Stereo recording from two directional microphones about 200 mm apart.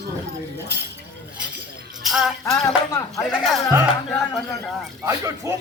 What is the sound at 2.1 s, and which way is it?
Music, centre (ahead or behind).